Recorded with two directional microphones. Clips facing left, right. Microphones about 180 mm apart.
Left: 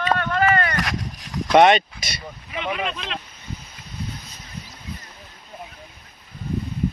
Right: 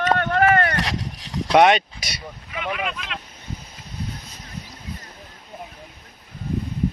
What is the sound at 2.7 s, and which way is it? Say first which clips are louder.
Speech: left 1 dB; 30° left (ahead or behind).